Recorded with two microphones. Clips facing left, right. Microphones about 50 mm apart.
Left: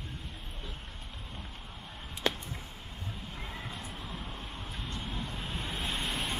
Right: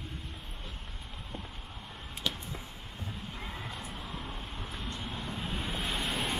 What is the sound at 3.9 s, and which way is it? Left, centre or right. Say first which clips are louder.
Vehicle: right 1 dB; right.